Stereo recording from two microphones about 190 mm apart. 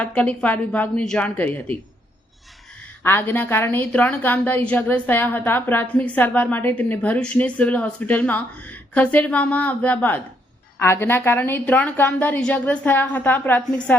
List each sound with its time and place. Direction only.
0.0 s a woman's voice: 5° left (ahead or behind)
3.0 s a woman's voice: 10° left (ahead or behind)